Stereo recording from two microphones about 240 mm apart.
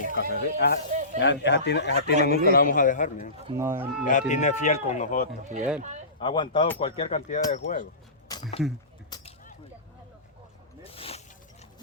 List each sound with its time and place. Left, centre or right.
0.1 s speech: left
0.9 s snake: right
1.2 s a man's voice: left
3.5 s speech: centre
4.0 s speech: left
5.5 s speech: centre
6.1 s a man's voice: centre
8.3 s speech: left
9.0 s a sound: centre
10.9 s mechanisms: left